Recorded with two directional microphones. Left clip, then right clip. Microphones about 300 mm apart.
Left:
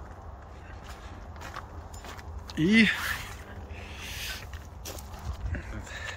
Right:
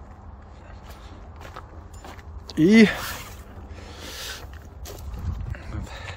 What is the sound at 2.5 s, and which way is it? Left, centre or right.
Speech, centre.